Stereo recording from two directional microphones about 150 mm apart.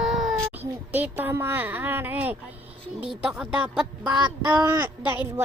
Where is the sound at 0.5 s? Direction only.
10° right (ahead or behind).